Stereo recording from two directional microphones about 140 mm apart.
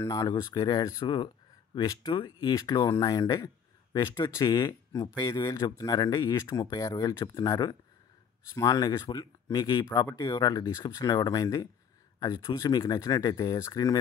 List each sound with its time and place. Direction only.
0.0 s speech: 25° left (ahead or behind)